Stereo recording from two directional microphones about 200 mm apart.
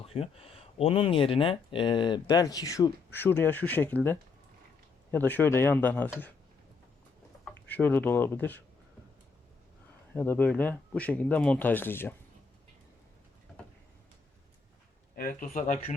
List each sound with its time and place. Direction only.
0.0 s speech: 30° left (ahead or behind); by 6.3 s 10° left (ahead or behind)
7.4 s speech: 10° left (ahead or behind)
10.2 s speech: 10° left (ahead or behind)
15.1 s speech: 45° left (ahead or behind)